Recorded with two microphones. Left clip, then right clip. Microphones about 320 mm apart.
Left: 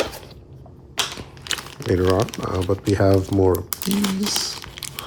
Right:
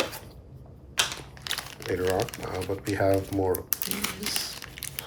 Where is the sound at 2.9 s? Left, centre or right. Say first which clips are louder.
Left 6 dB; centre.